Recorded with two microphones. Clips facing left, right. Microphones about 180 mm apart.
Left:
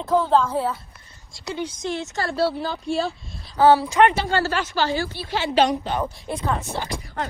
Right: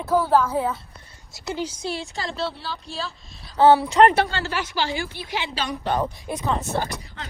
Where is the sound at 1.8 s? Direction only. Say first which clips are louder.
Left 2 dB; 10° right (ahead or behind).